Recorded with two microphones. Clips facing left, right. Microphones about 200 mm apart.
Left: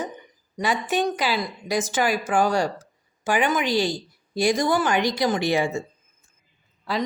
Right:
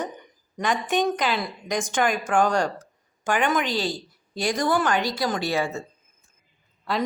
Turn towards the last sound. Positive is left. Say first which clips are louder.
# even
turn(degrees=0)  # may be behind; listen again after turning